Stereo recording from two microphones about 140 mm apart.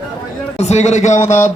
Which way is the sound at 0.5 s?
50° left (ahead or behind).